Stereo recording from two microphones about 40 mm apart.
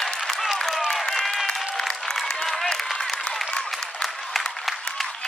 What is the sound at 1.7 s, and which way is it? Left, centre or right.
Applause, centre.